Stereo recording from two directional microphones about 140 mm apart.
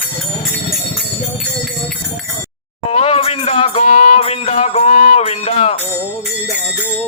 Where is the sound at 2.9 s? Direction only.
45° left (ahead or behind).